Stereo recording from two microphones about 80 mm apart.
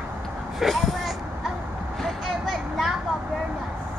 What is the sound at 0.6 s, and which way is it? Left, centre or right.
Vehicle, centre.